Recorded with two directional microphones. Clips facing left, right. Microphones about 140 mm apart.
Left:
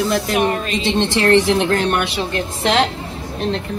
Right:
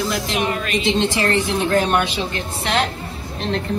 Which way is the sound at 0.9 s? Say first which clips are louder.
Left 8 dB; 70° left (ahead or behind).